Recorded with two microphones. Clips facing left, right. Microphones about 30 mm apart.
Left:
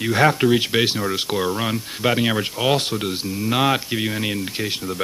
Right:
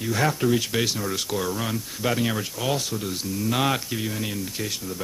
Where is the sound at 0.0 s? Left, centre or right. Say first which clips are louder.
Left 6 dB; left.